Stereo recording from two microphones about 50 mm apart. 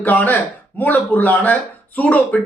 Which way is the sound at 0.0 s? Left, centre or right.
Left.